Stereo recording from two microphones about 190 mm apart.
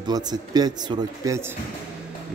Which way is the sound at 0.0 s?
20° right (ahead or behind).